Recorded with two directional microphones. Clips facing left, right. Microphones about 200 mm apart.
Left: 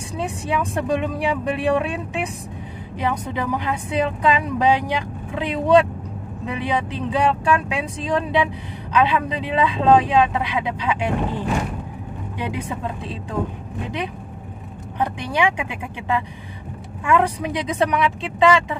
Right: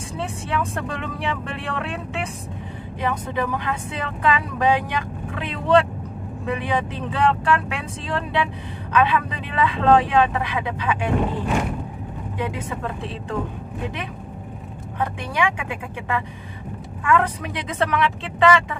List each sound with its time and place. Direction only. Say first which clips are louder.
0.2 s speech: left 2 dB; 15° left (ahead or behind)
15.0 s speech: left 2 dB; 20° left (ahead or behind)